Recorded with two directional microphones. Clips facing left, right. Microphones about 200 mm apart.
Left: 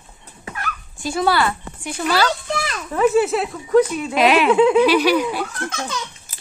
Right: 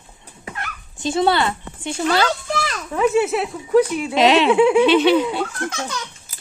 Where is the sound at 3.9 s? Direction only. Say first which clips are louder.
Right 1 dB; 25° right (ahead or behind).